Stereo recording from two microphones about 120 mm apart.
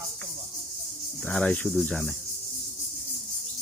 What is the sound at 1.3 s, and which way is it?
Speech, 10° left (ahead or behind).